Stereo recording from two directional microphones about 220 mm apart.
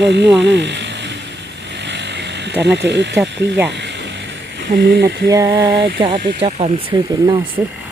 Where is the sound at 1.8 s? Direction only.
50° right (ahead or behind).